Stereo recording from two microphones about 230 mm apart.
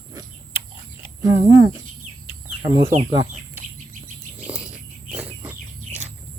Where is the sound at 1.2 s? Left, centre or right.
Centre.